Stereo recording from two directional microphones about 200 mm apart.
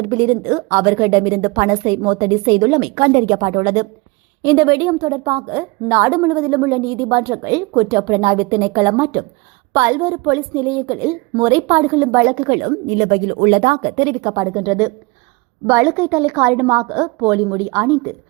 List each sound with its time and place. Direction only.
0.1 s a woman's voice: 20° right (ahead or behind)
4.4 s a woman's voice: 20° right (ahead or behind)
12.5 s a woman's voice: 30° right (ahead or behind); by 17.9 s 10° right (ahead or behind)